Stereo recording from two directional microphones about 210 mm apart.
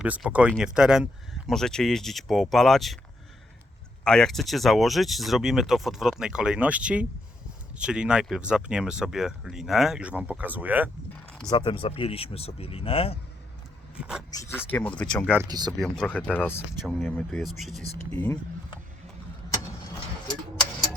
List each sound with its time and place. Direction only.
0.0 s speech: 5° right (ahead or behind)
4.0 s speech: 5° left (ahead or behind)
11.5 s speech: 25° left (ahead or behind)
14.0 s speech: 5° right (ahead or behind)
14.7 s speech: 5° left (ahead or behind)
15.4 s speech: 20° right (ahead or behind)
15.8 s speech: 5° left (ahead or behind)